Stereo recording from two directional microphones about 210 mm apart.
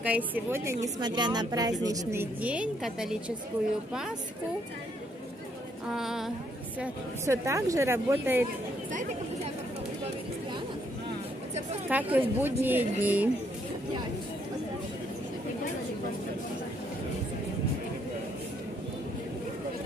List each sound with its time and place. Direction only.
0.0 s speech: 5° right (ahead or behind)
5.9 s speech: centre (ahead or behind)
6.8 s speech: 15° right (ahead or behind)
11.9 s speech: 10° right (ahead or behind)